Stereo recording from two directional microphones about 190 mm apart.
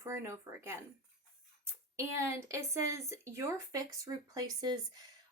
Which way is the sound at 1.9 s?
15° right (ahead or behind).